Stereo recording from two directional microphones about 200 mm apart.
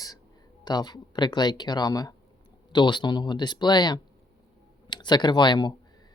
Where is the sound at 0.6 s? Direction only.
20° left (ahead or behind).